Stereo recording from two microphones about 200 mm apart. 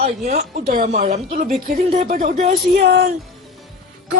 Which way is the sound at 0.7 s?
45° right (ahead or behind).